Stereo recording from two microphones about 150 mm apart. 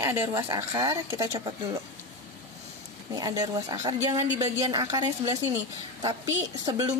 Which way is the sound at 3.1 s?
25° right (ahead or behind).